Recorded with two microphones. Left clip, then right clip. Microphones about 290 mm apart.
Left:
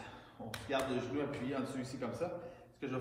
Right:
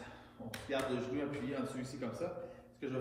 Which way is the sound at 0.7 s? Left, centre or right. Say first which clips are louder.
Left 1 dB; centre.